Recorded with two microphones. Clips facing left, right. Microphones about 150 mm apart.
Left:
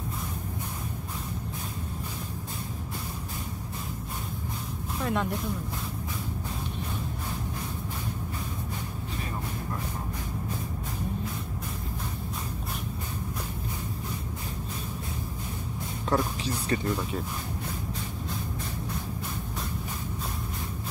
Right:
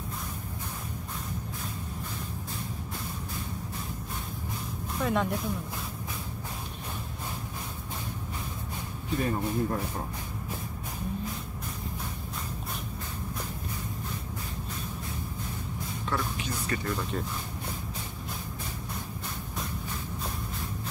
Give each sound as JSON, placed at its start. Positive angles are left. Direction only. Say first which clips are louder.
{"t": 5.0, "sound": "speech", "louder": "right 1 dB", "side_deg": 0}
{"t": 16.1, "sound": "speech", "louder": "left 5 dB", "side_deg": 30}